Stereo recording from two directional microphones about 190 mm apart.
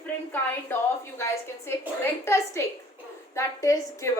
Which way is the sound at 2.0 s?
15° left (ahead or behind).